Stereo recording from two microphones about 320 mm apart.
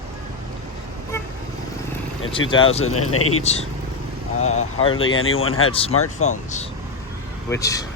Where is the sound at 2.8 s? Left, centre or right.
Left.